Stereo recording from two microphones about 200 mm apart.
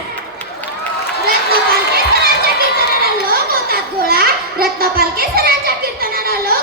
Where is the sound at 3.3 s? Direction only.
50° right (ahead or behind).